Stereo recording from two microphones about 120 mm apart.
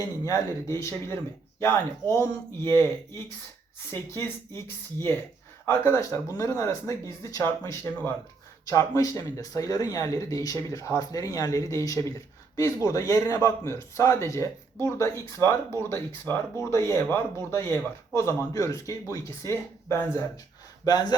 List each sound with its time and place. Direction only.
0.3 s speech: 25° left (ahead or behind)
4.1 s speech: 20° left (ahead or behind)
20.8 s speech: 35° left (ahead or behind)